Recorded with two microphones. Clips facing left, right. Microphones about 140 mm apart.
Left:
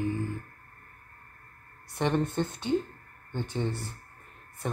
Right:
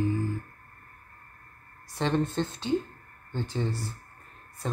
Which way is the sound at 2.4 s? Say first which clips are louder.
Even; 20° right (ahead or behind).